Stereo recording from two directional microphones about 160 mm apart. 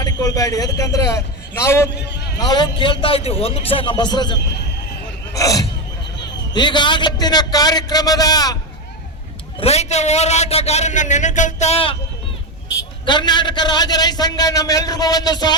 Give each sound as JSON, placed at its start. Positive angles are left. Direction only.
{"t": 0.0, "sound": "a man's voice", "side_deg": 25}
{"t": 2.0, "sound": "a man's voice", "side_deg": 90}
{"t": 2.4, "sound": "a man's voice", "side_deg": 25}
{"t": 9.6, "sound": "a man's voice", "side_deg": 40}
{"t": 13.1, "sound": "a man's voice", "side_deg": 30}